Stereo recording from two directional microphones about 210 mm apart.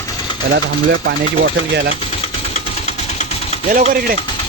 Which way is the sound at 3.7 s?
40° right (ahead or behind).